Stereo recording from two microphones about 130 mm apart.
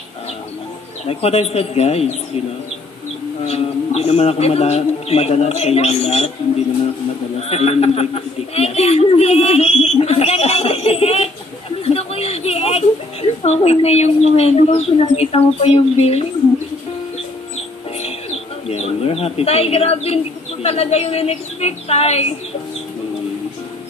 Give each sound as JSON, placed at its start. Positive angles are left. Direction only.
{"t": 1.0, "sound": "speech", "side_deg": 50}
{"t": 3.4, "sound": "speech", "side_deg": 55}
{"t": 7.3, "sound": "a woman's voice", "side_deg": 50}
{"t": 18.0, "sound": "bird", "side_deg": 55}
{"t": 20.6, "sound": "speech", "side_deg": 50}